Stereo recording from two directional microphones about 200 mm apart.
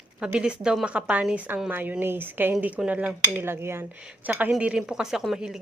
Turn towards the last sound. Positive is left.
turn(degrees=-5)  # may be behind; listen again after turning